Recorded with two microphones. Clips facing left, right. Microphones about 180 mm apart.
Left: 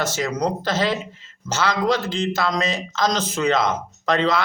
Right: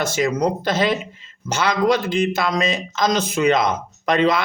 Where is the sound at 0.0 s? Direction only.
15° right (ahead or behind).